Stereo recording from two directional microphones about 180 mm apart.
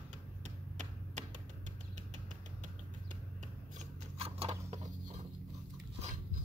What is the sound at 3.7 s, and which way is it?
Scissors, 35° right (ahead or behind).